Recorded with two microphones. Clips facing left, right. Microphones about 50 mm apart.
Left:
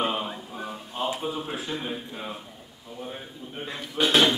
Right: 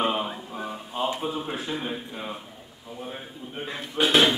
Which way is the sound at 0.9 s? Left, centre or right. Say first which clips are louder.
Right 1 dB; centre.